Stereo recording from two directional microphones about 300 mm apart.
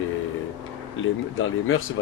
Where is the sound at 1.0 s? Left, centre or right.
Left.